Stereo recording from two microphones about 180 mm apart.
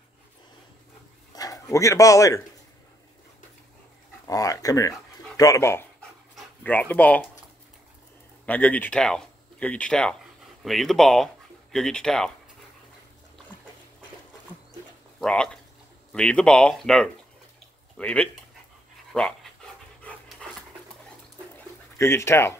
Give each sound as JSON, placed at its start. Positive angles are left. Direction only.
{"t": 1.3, "sound": "speech", "side_deg": 20}
{"t": 4.3, "sound": "speech", "side_deg": 20}
{"t": 8.5, "sound": "speech", "side_deg": 10}
{"t": 15.1, "sound": "speech", "side_deg": 5}
{"t": 20.0, "sound": "dog", "side_deg": 5}
{"t": 21.9, "sound": "speech", "side_deg": 15}